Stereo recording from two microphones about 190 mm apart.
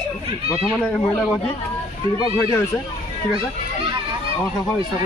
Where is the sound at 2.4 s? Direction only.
15° left (ahead or behind).